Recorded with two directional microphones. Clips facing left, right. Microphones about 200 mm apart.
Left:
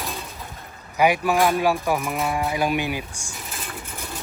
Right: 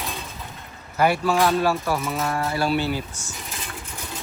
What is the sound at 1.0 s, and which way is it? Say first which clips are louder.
Speech: left 1 dB; 15° left (ahead or behind).